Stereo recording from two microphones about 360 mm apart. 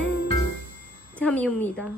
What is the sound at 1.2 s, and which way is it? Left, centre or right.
Speech, centre.